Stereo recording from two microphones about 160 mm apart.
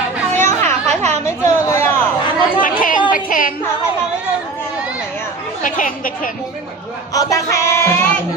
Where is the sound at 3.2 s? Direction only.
60° left (ahead or behind).